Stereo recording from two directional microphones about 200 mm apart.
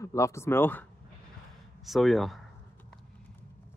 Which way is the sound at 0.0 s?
15° left (ahead or behind).